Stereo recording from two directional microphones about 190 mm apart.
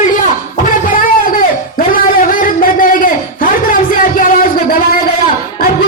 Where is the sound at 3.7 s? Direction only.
45° left (ahead or behind).